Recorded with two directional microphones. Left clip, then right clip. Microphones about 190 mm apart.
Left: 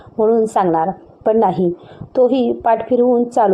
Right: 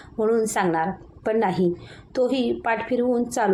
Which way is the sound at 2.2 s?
35° right (ahead or behind).